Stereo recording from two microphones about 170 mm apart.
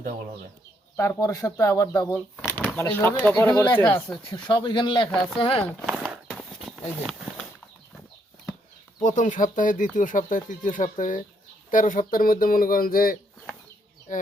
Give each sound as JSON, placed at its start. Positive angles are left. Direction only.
{"t": 0.9, "sound": "speech", "side_deg": 20}
{"t": 2.4, "sound": "shuffling cards", "side_deg": 15}
{"t": 2.7, "sound": "speech", "side_deg": 15}
{"t": 4.3, "sound": "speech", "side_deg": 25}
{"t": 5.8, "sound": "horse", "side_deg": 0}
{"t": 9.0, "sound": "speech", "side_deg": 45}